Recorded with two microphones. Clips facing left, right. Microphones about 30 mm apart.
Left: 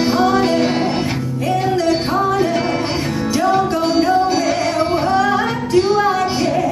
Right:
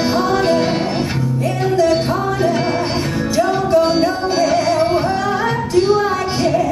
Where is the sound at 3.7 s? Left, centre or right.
Centre.